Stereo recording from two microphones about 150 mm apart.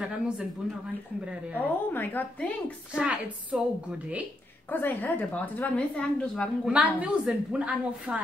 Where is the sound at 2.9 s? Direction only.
5° right (ahead or behind).